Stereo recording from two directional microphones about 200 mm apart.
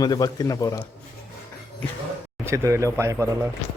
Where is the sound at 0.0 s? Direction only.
20° left (ahead or behind).